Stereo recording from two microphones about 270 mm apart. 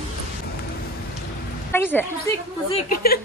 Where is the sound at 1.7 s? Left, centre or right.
Centre.